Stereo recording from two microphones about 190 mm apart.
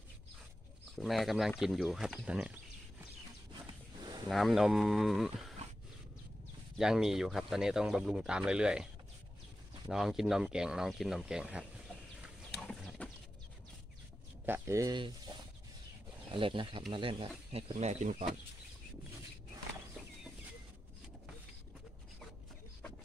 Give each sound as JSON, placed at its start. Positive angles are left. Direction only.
{"t": 0.9, "sound": "speech", "side_deg": 0}
{"t": 4.0, "sound": "wild animals", "side_deg": -20}
{"t": 4.3, "sound": "speech", "side_deg": 0}
{"t": 6.8, "sound": "speech", "side_deg": 0}
{"t": 9.8, "sound": "speech", "side_deg": 0}
{"t": 12.5, "sound": "horse", "side_deg": 5}
{"t": 14.4, "sound": "speech", "side_deg": -15}
{"t": 16.3, "sound": "speech", "side_deg": -25}